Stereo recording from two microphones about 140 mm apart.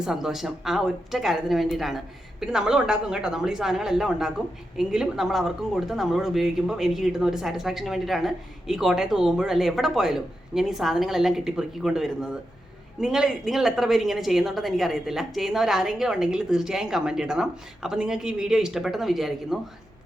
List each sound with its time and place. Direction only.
0.0 s speech: 5° right (ahead or behind)